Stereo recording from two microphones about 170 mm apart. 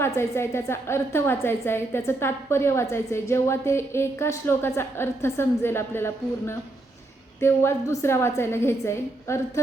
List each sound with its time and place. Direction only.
0.0 s a woman's voice: 15° left (ahead or behind)